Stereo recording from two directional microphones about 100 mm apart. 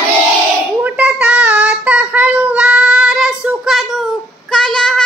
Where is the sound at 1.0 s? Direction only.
15° right (ahead or behind).